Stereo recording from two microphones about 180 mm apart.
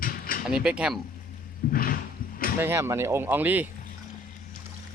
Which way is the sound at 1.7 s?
50° left (ahead or behind).